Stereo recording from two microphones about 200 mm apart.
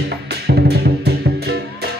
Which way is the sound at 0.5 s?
55° right (ahead or behind).